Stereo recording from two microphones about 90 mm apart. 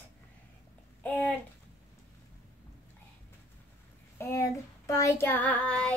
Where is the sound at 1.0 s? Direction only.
15° left (ahead or behind).